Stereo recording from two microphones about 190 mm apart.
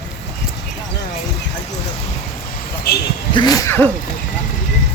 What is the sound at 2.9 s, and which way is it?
Vehicle, 55° left (ahead or behind).